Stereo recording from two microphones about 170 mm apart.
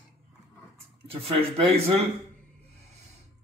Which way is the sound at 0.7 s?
35° right (ahead or behind).